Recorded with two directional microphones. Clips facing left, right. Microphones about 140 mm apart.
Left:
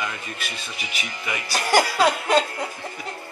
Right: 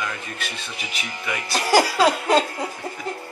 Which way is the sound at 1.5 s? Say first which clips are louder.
Right 2 dB; 35° right (ahead or behind).